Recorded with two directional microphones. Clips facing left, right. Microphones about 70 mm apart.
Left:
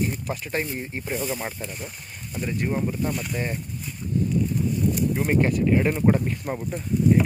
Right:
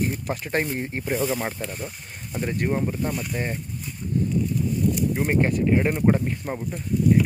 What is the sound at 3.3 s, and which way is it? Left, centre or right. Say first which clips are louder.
Speech: even; right.